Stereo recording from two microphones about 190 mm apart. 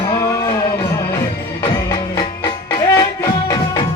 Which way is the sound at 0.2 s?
15° left (ahead or behind).